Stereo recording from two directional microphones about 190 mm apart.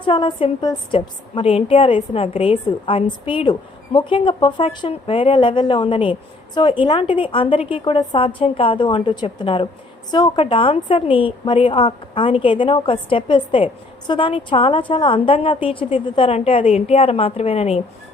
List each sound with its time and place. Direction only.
0.0 s a woman's voice: 25° left (ahead or behind)